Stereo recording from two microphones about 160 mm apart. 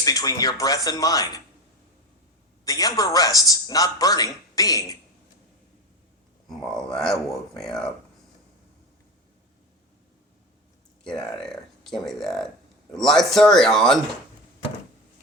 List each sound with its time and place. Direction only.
0.0 s a man's voice: 20° left (ahead or behind)
2.6 s a man's voice: 25° left (ahead or behind)
6.5 s speech: 5° left (ahead or behind)
11.0 s speech: 5° left (ahead or behind)